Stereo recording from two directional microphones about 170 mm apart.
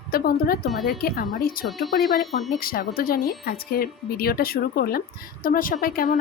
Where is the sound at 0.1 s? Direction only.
60° left (ahead or behind).